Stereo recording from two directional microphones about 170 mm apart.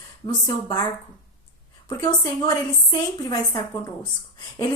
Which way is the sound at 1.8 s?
25° left (ahead or behind).